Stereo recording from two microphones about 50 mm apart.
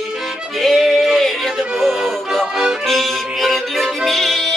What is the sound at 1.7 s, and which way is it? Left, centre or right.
Music, centre.